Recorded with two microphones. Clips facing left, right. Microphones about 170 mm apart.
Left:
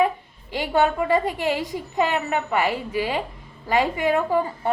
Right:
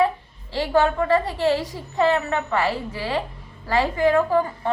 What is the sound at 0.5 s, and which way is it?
A woman's voice, 15° left (ahead or behind).